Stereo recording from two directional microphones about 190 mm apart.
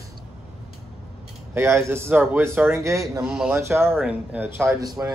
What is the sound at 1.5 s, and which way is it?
A man's voice, 15° right (ahead or behind).